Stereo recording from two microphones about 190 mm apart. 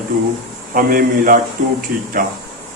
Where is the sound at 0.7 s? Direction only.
50° right (ahead or behind).